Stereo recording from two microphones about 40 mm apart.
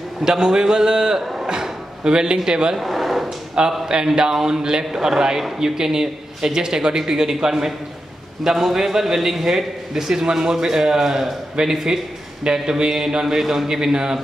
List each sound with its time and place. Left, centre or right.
0.2 s a man's voice: centre
2.8 s a sound: centre
3.5 s a man's voice: centre